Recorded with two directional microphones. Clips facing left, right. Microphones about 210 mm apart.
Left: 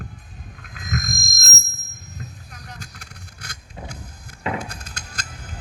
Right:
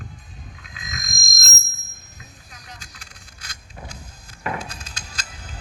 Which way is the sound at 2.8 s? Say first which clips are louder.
Left 6 dB; 60° left (ahead or behind).